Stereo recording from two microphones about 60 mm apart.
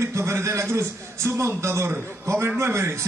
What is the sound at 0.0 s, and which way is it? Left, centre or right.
A man's voice, right.